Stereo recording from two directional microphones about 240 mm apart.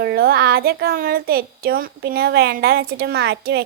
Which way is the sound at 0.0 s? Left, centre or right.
Right.